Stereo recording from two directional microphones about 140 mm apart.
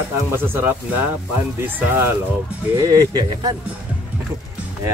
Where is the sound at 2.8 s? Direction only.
25° right (ahead or behind).